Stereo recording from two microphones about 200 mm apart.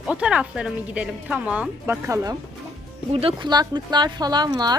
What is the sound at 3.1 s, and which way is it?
Speech, 30° right (ahead or behind).